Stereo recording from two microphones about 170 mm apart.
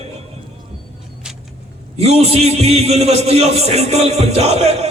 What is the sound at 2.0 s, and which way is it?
A man's voice, 35° right (ahead or behind).